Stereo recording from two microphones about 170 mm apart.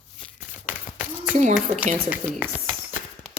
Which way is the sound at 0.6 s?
10° right (ahead or behind).